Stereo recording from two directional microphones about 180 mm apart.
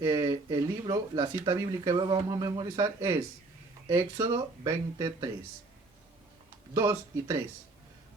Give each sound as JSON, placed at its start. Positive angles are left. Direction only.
{"t": 0.0, "sound": "speech", "side_deg": -20}
{"t": 6.7, "sound": "speech", "side_deg": -20}